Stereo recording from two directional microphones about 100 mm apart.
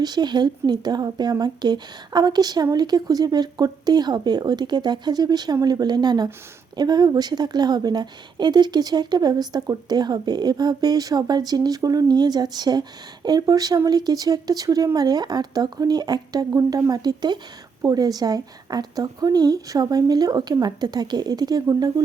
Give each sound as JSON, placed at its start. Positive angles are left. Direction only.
{"t": 0.0, "sound": "a woman's voice", "side_deg": -45}